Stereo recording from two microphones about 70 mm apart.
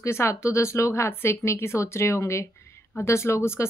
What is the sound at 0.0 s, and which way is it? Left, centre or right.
Speech, left.